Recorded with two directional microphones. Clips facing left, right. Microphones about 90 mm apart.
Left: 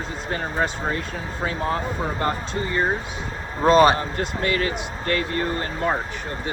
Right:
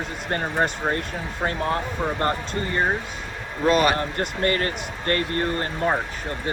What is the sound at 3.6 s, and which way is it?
Speech, 30° left (ahead or behind).